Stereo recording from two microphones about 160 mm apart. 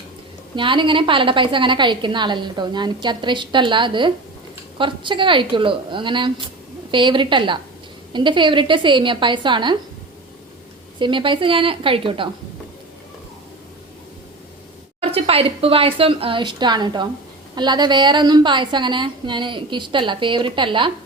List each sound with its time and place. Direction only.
0.5 s a woman's voice: 30° right (ahead or behind)
11.0 s speech: 30° right (ahead or behind)
15.0 s a woman's voice: 40° right (ahead or behind)